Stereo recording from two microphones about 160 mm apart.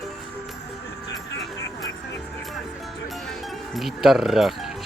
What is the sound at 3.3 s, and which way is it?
Music, centre (ahead or behind).